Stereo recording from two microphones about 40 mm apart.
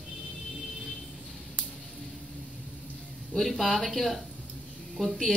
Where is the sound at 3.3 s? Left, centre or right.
Centre.